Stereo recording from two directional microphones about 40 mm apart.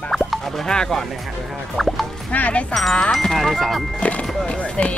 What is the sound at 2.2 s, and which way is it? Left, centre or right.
Speech, left.